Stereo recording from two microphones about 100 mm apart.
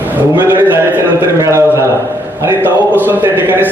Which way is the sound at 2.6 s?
20° right (ahead or behind).